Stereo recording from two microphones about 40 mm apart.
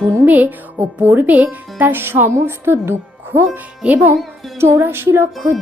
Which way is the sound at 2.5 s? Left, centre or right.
Right.